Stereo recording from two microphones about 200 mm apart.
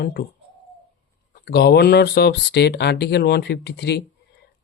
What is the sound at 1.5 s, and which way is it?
Speech, 55° left (ahead or behind).